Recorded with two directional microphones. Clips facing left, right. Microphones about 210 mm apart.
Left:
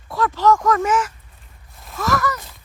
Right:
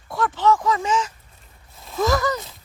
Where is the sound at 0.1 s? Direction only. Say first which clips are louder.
Left 2 dB; 5° right (ahead or behind).